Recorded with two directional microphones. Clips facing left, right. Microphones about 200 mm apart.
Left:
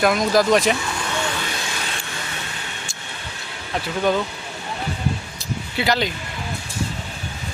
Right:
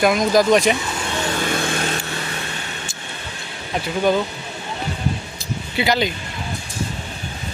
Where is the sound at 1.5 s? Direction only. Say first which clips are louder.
Right 7 dB; 55° right (ahead or behind).